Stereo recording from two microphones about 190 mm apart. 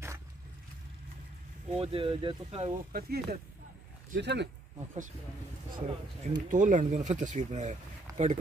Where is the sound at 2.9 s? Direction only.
50° right (ahead or behind).